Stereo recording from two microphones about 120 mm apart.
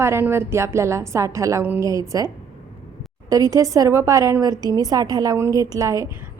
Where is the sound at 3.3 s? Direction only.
30° right (ahead or behind).